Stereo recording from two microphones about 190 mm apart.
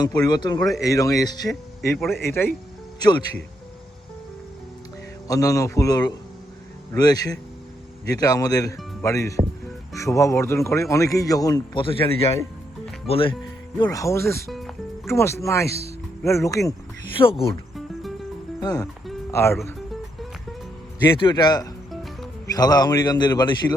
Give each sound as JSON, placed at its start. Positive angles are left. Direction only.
{"t": 0.0, "sound": "a man's voice", "side_deg": 20}
{"t": 5.3, "sound": "a man's voice", "side_deg": 20}
{"t": 17.7, "sound": "cricket", "side_deg": 0}
{"t": 18.6, "sound": "speech", "side_deg": 20}
{"t": 21.2, "sound": "speech", "side_deg": 25}